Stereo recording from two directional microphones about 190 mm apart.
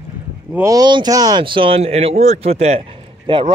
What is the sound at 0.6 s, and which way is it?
Speech, 20° right (ahead or behind).